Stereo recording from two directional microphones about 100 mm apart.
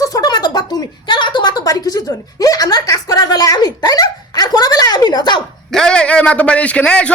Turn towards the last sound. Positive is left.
turn(degrees=10)  # may be behind; listen again after turning